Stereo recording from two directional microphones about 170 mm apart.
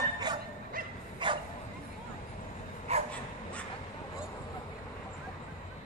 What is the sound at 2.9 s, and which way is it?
Bow-wow, 40° right (ahead or behind).